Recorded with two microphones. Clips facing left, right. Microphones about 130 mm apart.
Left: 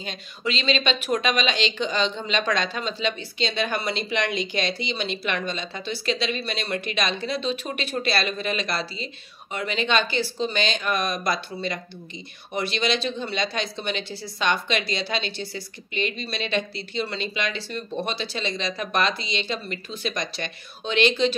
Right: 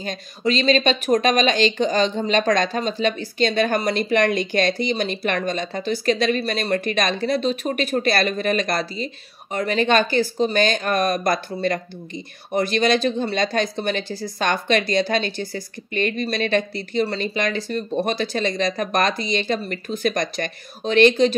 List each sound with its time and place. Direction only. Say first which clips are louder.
0.0 s speech: right 6 dB; 40° right (ahead or behind)